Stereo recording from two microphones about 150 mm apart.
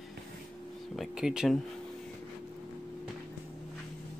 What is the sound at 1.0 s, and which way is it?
Speech, 5° right (ahead or behind).